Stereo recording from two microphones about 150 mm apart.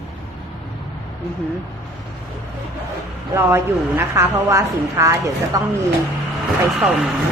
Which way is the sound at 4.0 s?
15° right (ahead or behind).